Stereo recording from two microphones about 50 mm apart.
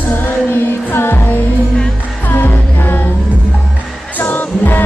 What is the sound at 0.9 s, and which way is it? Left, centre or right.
Music, left.